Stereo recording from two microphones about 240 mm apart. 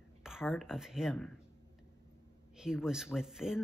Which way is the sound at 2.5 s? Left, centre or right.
Centre.